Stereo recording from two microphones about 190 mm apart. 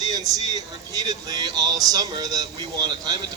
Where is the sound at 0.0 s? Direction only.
20° right (ahead or behind).